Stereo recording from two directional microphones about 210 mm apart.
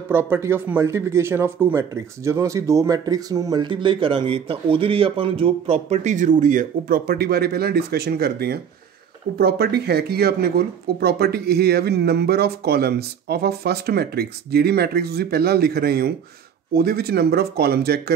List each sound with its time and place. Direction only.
0.1 s speech: 10° right (ahead or behind); by 18.1 s 50° right (ahead or behind)